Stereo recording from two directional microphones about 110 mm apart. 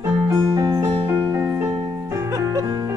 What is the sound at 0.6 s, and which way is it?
Music, 30° right (ahead or behind).